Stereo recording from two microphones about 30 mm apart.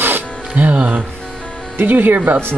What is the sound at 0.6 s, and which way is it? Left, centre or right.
Speech, right.